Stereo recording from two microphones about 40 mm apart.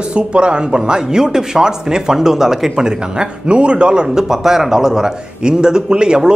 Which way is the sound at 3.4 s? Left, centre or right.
Right.